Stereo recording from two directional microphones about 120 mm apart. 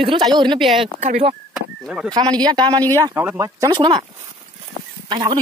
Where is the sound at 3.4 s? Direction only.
35° right (ahead or behind).